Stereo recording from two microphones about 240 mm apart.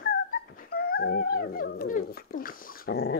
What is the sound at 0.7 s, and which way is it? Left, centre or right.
Speech, left.